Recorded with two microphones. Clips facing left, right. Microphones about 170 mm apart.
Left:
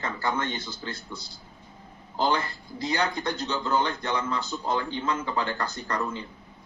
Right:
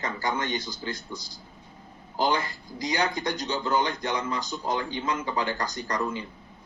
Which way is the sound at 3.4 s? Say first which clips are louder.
Even; 10° right (ahead or behind).